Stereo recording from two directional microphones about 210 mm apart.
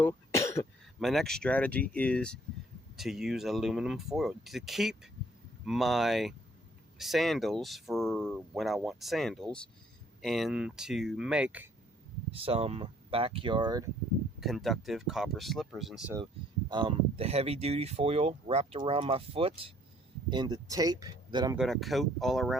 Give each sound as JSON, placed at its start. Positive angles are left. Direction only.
{"t": 0.0, "sound": "cough", "side_deg": 15}
{"t": 0.9, "sound": "speech", "side_deg": 0}
{"t": 12.3, "sound": "speech", "side_deg": -30}
{"t": 14.4, "sound": "speech", "side_deg": 0}
{"t": 16.6, "sound": "speech", "side_deg": -25}
{"t": 21.5, "sound": "speech", "side_deg": 0}